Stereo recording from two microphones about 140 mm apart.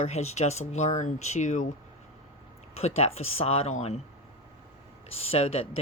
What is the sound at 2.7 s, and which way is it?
Speech, 50° left (ahead or behind).